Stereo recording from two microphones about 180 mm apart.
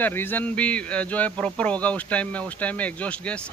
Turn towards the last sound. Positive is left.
turn(degrees=5)  # may be behind; listen again after turning